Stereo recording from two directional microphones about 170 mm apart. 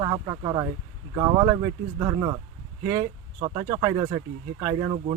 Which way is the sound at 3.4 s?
30° right (ahead or behind).